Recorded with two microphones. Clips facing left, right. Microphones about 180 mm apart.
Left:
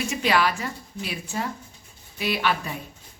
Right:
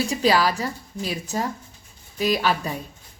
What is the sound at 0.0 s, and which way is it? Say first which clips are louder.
A woman's voice: right 3 dB; 35° right (ahead or behind).